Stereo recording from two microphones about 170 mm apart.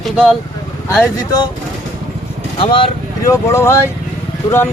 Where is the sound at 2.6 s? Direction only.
30° left (ahead or behind).